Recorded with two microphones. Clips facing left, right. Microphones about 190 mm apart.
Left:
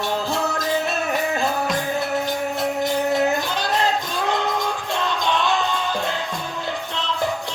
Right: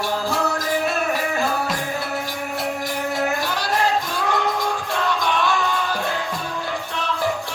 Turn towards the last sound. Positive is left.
turn(degrees=20)  # may be behind; listen again after turning